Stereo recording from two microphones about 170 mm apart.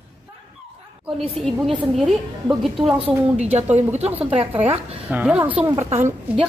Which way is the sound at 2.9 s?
40° right (ahead or behind).